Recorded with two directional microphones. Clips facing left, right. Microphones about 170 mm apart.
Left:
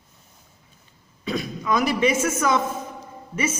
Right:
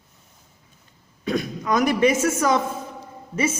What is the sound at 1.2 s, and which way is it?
Speech, 50° right (ahead or behind).